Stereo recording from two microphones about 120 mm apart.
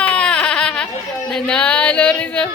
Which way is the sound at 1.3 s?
10° left (ahead or behind).